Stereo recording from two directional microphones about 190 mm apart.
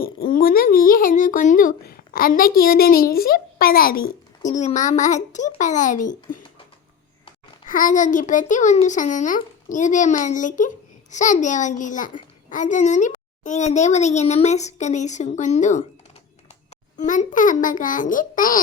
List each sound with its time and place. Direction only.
0.3 s speech: 50° left (ahead or behind)
7.7 s a child's voice: 45° left (ahead or behind)
17.0 s a child's voice: 40° left (ahead or behind)